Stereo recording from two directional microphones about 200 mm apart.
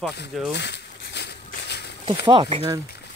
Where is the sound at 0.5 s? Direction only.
60° left (ahead or behind).